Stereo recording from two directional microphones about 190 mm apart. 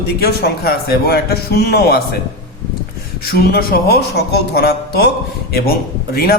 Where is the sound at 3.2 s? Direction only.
55° left (ahead or behind).